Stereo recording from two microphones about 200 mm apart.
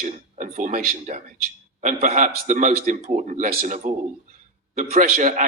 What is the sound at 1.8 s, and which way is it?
Speech, 40° right (ahead or behind).